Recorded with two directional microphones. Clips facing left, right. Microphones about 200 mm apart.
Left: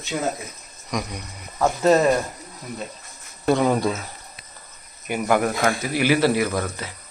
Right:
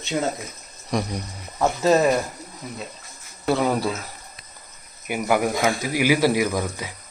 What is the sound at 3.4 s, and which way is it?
Speech, 5° right (ahead or behind).